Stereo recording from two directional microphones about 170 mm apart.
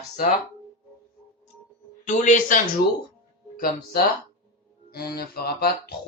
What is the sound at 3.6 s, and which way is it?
Speech, 55° left (ahead or behind).